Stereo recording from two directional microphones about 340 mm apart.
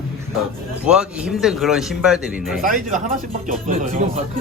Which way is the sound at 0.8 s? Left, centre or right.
Centre.